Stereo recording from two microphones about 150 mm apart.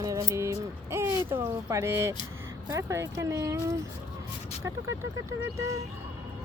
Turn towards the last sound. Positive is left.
turn(degrees=-20)  # may be behind; listen again after turning